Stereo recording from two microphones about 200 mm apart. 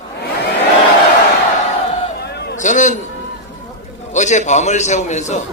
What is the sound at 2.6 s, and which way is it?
Speech, 35° left (ahead or behind).